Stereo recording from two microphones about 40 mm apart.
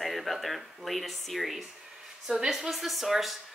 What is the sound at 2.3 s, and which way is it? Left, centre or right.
Speech, centre.